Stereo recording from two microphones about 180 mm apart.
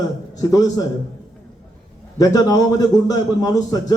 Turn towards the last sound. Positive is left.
turn(degrees=20)  # may be behind; listen again after turning